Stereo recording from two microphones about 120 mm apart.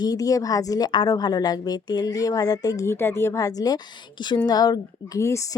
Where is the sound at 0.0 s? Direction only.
30° left (ahead or behind).